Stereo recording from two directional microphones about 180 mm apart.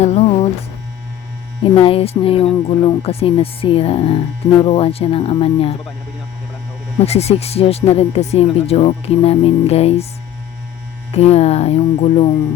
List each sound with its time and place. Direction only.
0.0 s music: 35° left (ahead or behind)
1.6 s speech: 30° left (ahead or behind)
7.0 s speech: 35° left (ahead or behind)
11.1 s speech: 35° left (ahead or behind)